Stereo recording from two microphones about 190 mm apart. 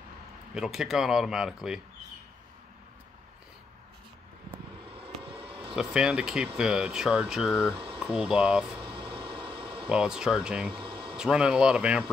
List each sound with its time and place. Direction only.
0.6 s speech: 5° right (ahead or behind)
5.0 s vehicle: 30° right (ahead or behind)
5.8 s speech: 5° right (ahead or behind)
7.7 s boiling: 25° right (ahead or behind)
8.0 s speech: 5° right (ahead or behind)
8.8 s a sound: 25° right (ahead or behind)
9.8 s speech: 5° right (ahead or behind)
10.7 s a sound: 25° right (ahead or behind)
11.1 s speech: 5° right (ahead or behind)